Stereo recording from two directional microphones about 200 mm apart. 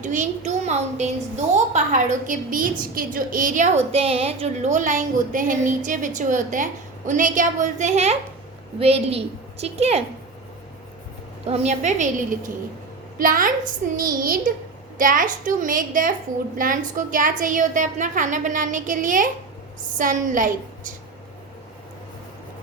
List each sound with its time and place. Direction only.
0.0 s a woman's voice: 35° right (ahead or behind)
11.4 s a woman's voice: 30° right (ahead or behind)